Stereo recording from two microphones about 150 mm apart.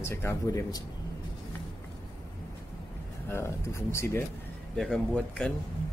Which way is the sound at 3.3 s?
15° left (ahead or behind).